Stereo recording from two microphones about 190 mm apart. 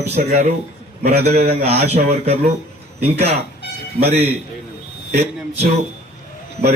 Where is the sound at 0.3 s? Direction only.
40° right (ahead or behind).